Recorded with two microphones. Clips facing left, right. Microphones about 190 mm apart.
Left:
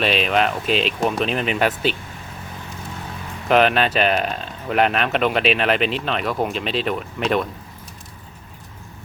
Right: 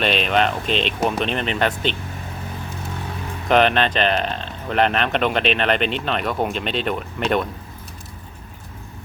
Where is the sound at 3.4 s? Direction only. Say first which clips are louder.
Even; 5° left (ahead or behind).